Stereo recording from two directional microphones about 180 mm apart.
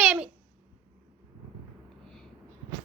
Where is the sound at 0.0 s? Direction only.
5° right (ahead or behind).